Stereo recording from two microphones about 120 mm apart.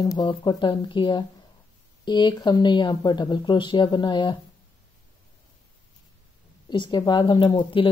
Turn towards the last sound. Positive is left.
turn(degrees=45)  # may be behind; listen again after turning